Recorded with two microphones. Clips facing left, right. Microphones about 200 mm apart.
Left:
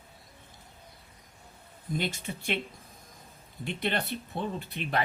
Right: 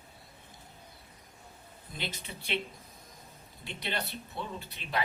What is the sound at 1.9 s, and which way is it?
Speech, 45° left (ahead or behind).